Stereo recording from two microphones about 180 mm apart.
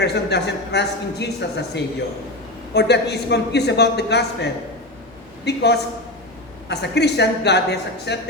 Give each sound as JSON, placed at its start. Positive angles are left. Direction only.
{"t": 0.0, "sound": "a man's voice", "side_deg": 65}